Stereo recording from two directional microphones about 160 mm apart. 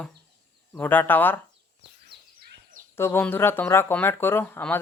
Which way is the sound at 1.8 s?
90° right.